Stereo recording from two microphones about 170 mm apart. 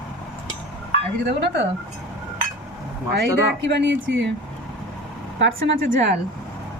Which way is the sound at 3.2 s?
90° right.